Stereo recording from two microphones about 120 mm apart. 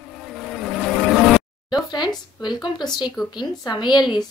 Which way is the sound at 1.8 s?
40° left (ahead or behind).